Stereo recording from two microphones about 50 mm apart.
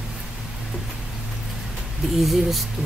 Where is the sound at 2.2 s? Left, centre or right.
Centre.